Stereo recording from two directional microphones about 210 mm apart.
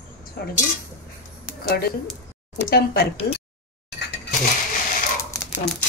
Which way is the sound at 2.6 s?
50° left (ahead or behind).